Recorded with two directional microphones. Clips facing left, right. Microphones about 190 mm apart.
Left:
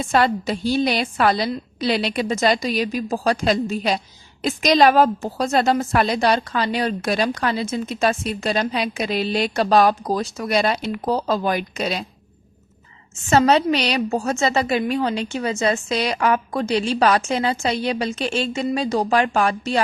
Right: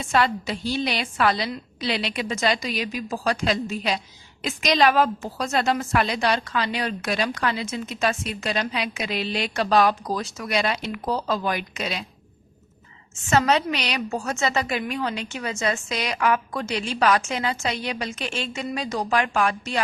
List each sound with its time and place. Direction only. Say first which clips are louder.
0.0 s a woman's voice: left 4 dB; 40° left (ahead or behind)
13.3 s a woman's voice: left 5 dB; 35° left (ahead or behind)